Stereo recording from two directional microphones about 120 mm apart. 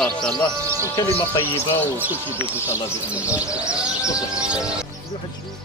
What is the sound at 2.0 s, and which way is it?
Speech, 15° right (ahead or behind).